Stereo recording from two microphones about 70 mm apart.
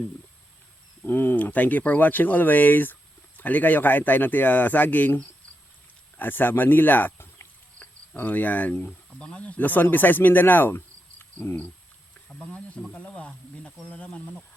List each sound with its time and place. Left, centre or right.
1.0 s speech: left
12.5 s speech: centre